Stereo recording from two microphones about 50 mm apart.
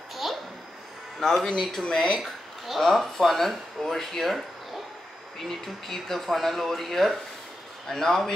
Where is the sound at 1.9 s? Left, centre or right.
Centre.